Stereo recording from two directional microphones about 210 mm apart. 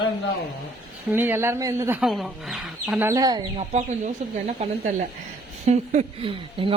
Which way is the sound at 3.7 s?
30° right (ahead or behind).